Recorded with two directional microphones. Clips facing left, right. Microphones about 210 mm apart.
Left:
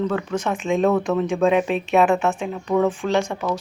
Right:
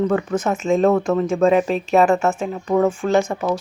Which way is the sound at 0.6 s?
Centre (ahead or behind).